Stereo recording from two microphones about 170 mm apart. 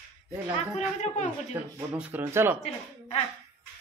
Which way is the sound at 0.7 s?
40° left (ahead or behind).